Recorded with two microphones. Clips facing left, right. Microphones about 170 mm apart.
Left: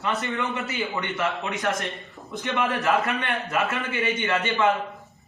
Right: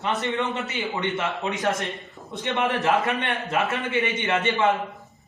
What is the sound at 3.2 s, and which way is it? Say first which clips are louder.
A man's voice: right 1 dB; 20° right (ahead or behind).